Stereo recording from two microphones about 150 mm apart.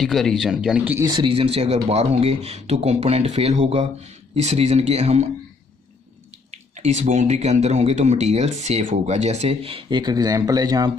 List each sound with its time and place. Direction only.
0.0 s speech: centre (ahead or behind)
0.9 s speech: 30° right (ahead or behind); by 5.2 s 45° right (ahead or behind)
6.5 s speech: 50° right (ahead or behind); by 10.9 s 25° right (ahead or behind)